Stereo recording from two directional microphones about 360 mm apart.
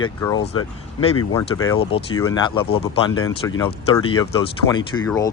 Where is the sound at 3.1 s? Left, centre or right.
Left.